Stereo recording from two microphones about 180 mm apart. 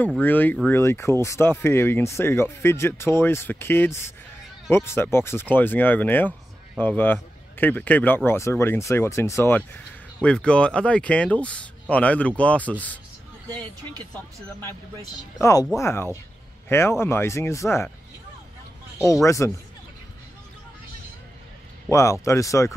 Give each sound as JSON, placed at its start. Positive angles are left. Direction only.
{"t": 0.2, "sound": "speech", "side_deg": 10}
{"t": 13.5, "sound": "speech", "side_deg": -25}
{"t": 14.1, "sound": "speech", "side_deg": 15}
{"t": 19.2, "sound": "speech", "side_deg": 15}
{"t": 21.9, "sound": "speech", "side_deg": 15}